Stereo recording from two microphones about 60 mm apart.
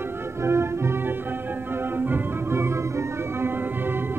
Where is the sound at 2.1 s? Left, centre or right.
Right.